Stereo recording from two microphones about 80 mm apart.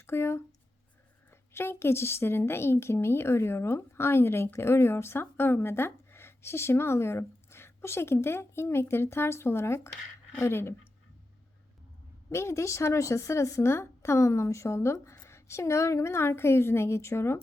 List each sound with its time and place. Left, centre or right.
0.0 s a woman's voice: left
12.3 s a woman's voice: left